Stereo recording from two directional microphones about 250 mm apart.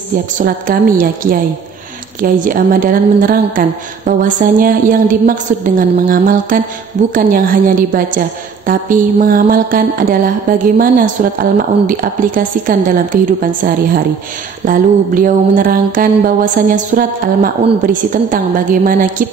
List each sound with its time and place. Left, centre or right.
0.1 s a woman's voice: right
14.6 s a woman's voice: right